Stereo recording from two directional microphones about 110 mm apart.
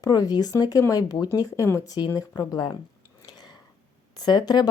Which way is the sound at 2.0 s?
40° left (ahead or behind).